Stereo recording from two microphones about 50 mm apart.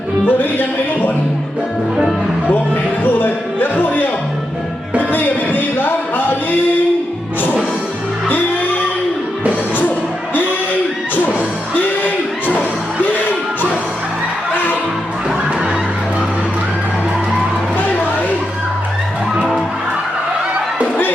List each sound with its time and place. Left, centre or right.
0.3 s speech: left
3.0 s music: left
8.3 s music: left
11.7 s music: left
14.5 s music: left
17.7 s a sound: left